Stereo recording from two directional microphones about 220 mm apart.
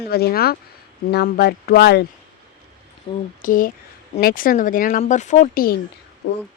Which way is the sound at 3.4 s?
40° left (ahead or behind).